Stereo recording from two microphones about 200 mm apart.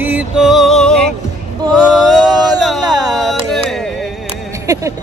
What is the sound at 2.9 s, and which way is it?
Speech, 20° right (ahead or behind).